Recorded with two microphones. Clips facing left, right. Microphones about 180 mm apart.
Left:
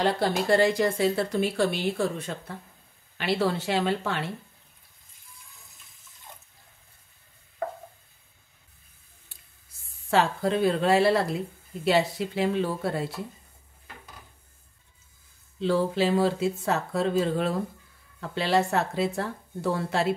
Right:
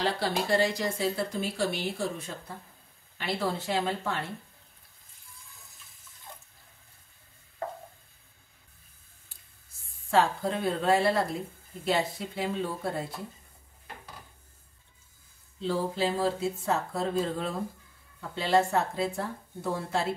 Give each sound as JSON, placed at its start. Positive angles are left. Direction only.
{"t": 0.0, "sound": "speech", "side_deg": 50}
{"t": 3.2, "sound": "speech", "side_deg": 75}
{"t": 10.1, "sound": "speech", "side_deg": 80}
{"t": 15.6, "sound": "speech", "side_deg": 75}